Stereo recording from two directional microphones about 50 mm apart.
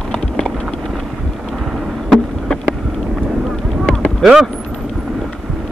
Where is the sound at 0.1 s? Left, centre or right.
Centre.